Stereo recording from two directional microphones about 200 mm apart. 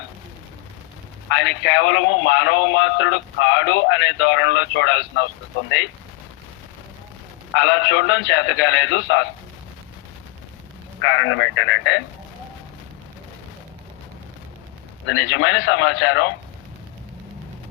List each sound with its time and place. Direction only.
1.3 s speech: 65° left (ahead or behind)
7.5 s speech: 65° left (ahead or behind)
11.0 s speech: 70° left (ahead or behind)
15.0 s speech: 65° left (ahead or behind)